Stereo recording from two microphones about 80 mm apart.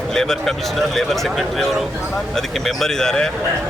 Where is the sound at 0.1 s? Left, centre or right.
Centre.